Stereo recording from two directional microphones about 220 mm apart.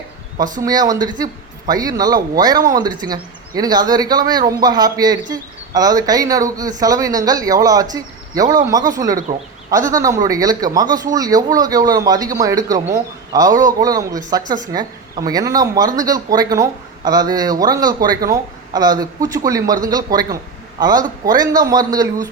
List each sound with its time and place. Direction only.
0.6 s a woman's voice: 15° right (ahead or behind)